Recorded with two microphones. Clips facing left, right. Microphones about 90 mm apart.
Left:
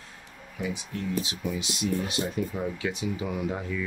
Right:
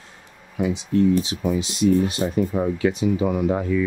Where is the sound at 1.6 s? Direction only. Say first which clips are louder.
Right 12 dB; 35° right (ahead or behind).